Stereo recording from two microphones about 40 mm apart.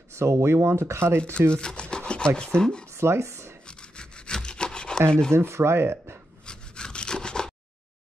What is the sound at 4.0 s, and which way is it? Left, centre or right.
Sawing, left.